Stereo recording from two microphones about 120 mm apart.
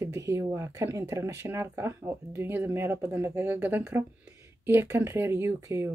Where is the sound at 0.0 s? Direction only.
25° right (ahead or behind).